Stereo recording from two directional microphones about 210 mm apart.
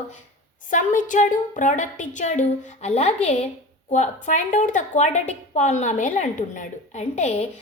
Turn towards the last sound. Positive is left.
turn(degrees=35)  # may be behind; listen again after turning